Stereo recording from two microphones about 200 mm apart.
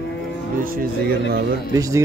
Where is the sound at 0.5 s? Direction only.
45° right (ahead or behind).